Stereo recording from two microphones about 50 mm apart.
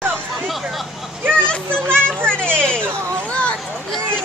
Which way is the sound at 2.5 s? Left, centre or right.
Centre.